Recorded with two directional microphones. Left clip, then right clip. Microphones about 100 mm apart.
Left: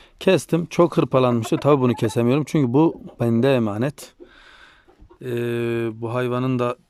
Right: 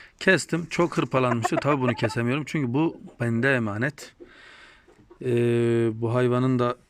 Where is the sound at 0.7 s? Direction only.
30° left (ahead or behind).